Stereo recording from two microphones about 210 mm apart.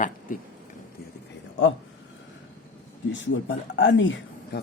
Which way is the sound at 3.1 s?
60° left (ahead or behind).